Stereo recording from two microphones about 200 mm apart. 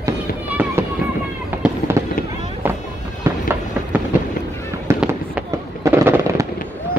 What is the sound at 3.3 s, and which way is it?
Fireworks, 15° right (ahead or behind).